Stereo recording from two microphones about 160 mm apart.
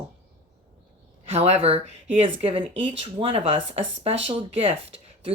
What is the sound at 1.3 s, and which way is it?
Speech, 40° right (ahead or behind).